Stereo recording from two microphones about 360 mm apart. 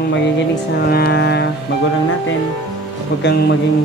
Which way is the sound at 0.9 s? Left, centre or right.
Left.